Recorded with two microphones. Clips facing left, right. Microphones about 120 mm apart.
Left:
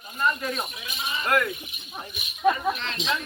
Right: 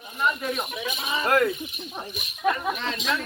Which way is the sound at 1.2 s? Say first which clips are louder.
Right 3 dB; 30° right (ahead or behind).